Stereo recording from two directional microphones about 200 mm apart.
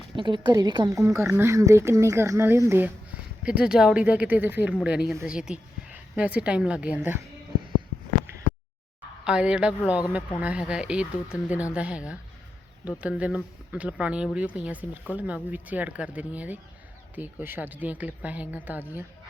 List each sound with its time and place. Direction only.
0.2 s a woman's voice: 25° right (ahead or behind)
9.2 s a woman's voice: 5° right (ahead or behind)